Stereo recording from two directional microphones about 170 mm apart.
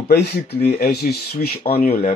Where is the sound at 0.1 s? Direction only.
70° left (ahead or behind).